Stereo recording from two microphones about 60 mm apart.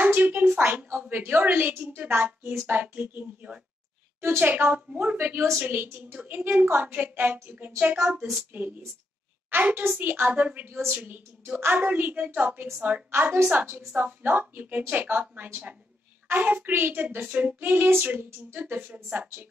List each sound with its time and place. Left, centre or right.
0.0 s a sound: right
1.0 s a woman's voice: right
5.2 s a woman's voice: right
13.1 s a woman's voice: right
13.5 s a woman's voice: right